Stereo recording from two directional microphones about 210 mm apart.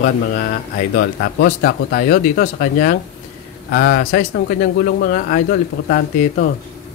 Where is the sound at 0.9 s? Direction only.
50° left (ahead or behind).